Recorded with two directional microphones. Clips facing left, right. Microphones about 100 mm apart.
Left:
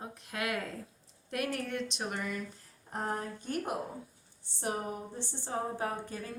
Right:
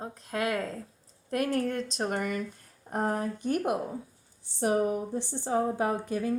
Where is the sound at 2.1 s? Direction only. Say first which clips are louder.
Right 6 dB; 60° right (ahead or behind).